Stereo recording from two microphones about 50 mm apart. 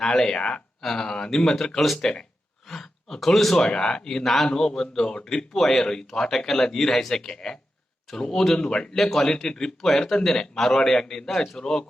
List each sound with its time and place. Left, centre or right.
0.0 s speech: centre
2.0 s speech: centre
2.6 s speech: centre
9.0 s speech: centre